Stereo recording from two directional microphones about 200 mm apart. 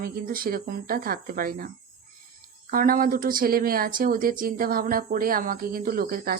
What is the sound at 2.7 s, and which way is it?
Speech, 45° right (ahead or behind).